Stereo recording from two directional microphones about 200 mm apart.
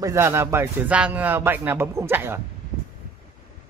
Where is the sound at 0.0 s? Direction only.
15° right (ahead or behind).